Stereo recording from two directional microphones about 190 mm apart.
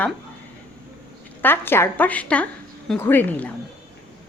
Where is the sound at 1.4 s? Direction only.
10° left (ahead or behind).